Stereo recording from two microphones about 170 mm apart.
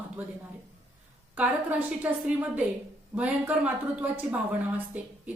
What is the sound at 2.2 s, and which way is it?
A woman's voice, 10° right (ahead or behind).